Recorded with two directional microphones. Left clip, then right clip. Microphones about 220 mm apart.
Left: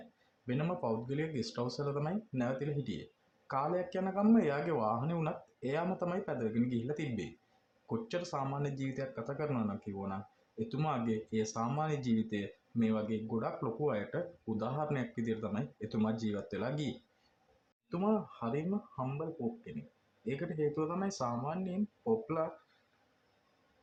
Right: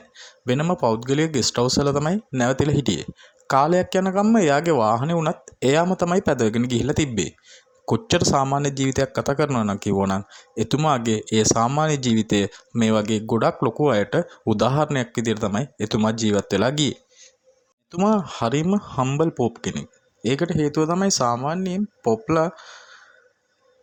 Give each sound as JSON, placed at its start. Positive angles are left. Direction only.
{"t": 0.4, "sound": "speech", "side_deg": -45}
{"t": 18.0, "sound": "speech", "side_deg": -45}
{"t": 20.2, "sound": "speech", "side_deg": -45}